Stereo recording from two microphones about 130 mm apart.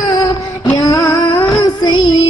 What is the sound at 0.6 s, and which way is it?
Music, 30° left (ahead or behind).